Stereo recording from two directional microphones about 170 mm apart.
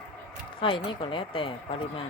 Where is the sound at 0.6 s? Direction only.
30° left (ahead or behind).